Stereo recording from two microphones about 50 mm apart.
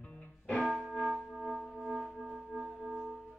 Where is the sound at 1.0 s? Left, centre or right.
Centre.